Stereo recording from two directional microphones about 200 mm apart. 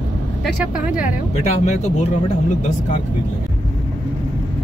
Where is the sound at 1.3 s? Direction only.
35° left (ahead or behind).